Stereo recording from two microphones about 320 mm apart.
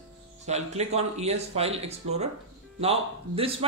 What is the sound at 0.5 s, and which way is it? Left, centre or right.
A man's voice, centre.